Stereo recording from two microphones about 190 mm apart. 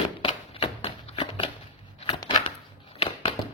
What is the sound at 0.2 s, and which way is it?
Tap, 30° left (ahead or behind).